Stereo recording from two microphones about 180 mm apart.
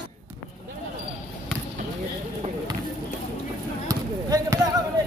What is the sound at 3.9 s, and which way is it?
Basketball bounce, 20° right (ahead or behind).